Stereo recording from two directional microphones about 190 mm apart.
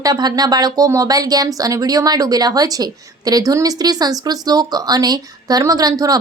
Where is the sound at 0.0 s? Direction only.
20° right (ahead or behind).